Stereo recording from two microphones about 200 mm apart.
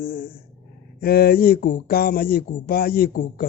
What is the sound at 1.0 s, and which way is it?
Speech, 50° left (ahead or behind).